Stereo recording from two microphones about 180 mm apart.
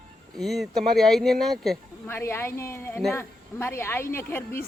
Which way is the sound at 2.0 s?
15° left (ahead or behind).